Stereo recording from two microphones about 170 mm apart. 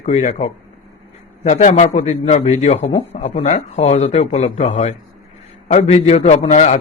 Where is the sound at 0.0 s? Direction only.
40° left (ahead or behind).